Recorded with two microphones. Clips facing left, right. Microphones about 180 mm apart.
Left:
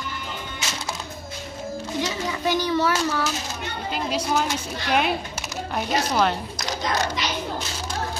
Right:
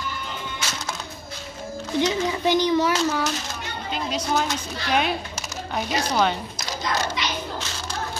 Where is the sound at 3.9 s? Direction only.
5° left (ahead or behind).